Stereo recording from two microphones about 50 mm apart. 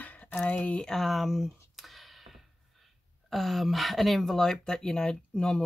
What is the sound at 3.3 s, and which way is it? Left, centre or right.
Speech, centre.